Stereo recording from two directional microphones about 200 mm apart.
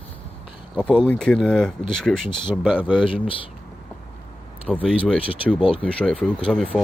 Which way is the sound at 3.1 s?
25° left (ahead or behind).